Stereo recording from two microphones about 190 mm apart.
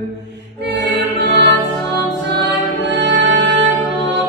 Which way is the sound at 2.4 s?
65° right (ahead or behind).